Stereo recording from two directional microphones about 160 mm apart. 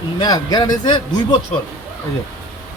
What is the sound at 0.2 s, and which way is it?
Speech, 25° left (ahead or behind).